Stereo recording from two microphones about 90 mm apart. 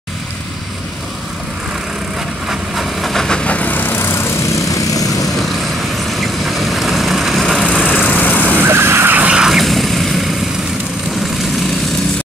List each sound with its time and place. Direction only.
2.4 s vehicle: 5° right (ahead or behind); by 5.3 s 40° left (ahead or behind)
6.0 s vehicle: centre (ahead or behind)
7.8 s vehicle: 20° left (ahead or behind)
8.5 s vehicle: 25° right (ahead or behind)
9.4 s vehicle: centre (ahead or behind)